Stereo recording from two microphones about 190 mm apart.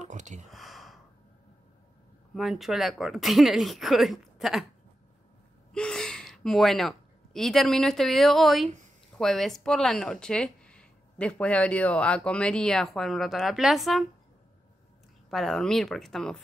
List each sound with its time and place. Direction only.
0.0 s a sound: 40° right (ahead or behind)
0.5 s gasp: centre (ahead or behind)
2.3 s speech: centre (ahead or behind)
5.7 s a woman's voice: 5° left (ahead or behind)
15.2 s speech: centre (ahead or behind)